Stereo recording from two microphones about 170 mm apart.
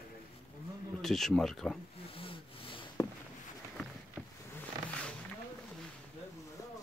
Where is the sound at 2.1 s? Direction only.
35° left (ahead or behind).